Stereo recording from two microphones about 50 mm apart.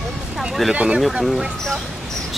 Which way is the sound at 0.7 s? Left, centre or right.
Right.